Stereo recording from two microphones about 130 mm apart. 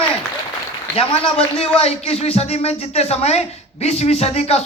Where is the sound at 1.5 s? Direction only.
50° left (ahead or behind).